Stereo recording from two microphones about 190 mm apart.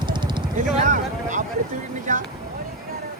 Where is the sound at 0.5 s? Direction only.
40° right (ahead or behind).